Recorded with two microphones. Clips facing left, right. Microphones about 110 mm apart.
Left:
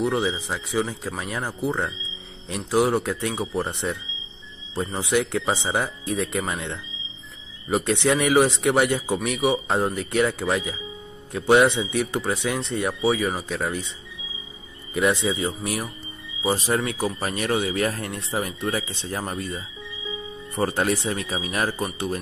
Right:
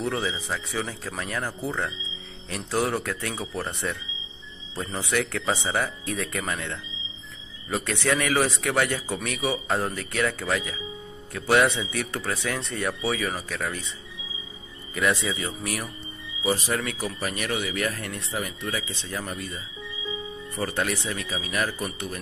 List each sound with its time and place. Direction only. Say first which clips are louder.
0.0 s speech: left 5 dB; 25° left (ahead or behind)
2.9 s speech: left 5 dB; 25° left (ahead or behind)
5.3 s speech: left 3 dB; 20° left (ahead or behind)
15.0 s speech: left 4 dB; 25° left (ahead or behind)